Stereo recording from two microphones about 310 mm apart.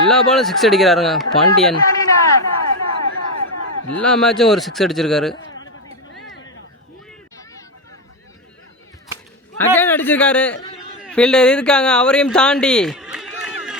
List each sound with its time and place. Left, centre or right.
0.1 s speech: centre
2.6 s a sound: left
4.0 s speech: centre
9.7 s speech: centre